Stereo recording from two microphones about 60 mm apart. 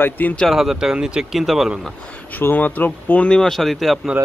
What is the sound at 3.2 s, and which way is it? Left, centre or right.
Speech, centre.